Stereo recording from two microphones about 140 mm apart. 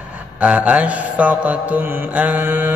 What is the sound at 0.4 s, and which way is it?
Mantra, 10° right (ahead or behind).